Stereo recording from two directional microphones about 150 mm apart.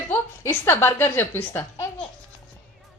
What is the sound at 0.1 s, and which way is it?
A woman's voice, 15° left (ahead or behind).